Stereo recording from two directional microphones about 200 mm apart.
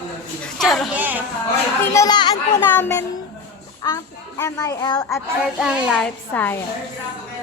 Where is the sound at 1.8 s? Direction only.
15° left (ahead or behind).